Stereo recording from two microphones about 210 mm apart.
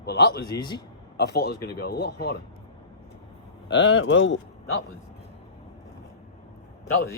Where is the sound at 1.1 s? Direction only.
50° left (ahead or behind).